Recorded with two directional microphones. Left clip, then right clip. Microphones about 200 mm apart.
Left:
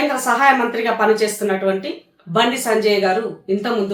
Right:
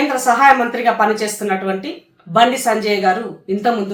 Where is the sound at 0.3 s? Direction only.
5° right (ahead or behind).